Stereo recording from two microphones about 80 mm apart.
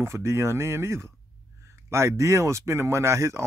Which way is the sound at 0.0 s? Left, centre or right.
Right.